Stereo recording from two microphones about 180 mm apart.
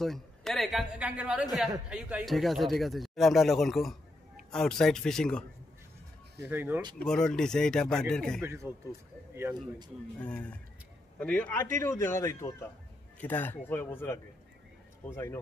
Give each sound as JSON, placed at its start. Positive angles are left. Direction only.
{"t": 0.0, "sound": "speech", "side_deg": 0}
{"t": 6.4, "sound": "speech", "side_deg": -10}
{"t": 7.0, "sound": "speech", "side_deg": 5}
{"t": 8.4, "sound": "a man's voice", "side_deg": -15}
{"t": 10.2, "sound": "speech", "side_deg": 5}